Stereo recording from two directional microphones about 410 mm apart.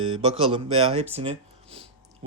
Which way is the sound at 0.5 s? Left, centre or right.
Centre.